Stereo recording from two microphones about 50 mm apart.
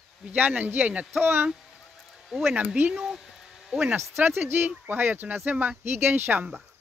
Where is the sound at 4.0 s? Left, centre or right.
Right.